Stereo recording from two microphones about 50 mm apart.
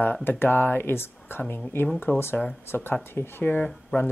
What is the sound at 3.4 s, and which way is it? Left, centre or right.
Speech, left.